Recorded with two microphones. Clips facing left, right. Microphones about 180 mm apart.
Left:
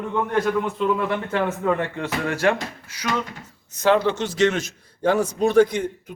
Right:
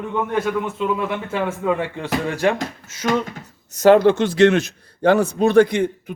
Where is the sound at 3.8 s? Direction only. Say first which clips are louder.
Right 7 dB; 45° right (ahead or behind).